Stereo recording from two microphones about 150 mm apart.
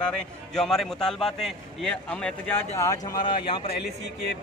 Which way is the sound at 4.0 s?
90° left.